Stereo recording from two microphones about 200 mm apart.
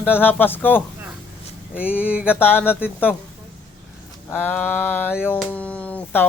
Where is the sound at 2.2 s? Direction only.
10° left (ahead or behind).